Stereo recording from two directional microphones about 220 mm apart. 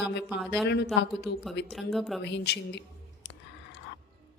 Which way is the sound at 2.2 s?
50° left (ahead or behind).